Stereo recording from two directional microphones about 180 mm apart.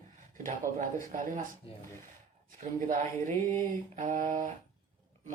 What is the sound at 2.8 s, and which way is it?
Speech, 45° right (ahead or behind).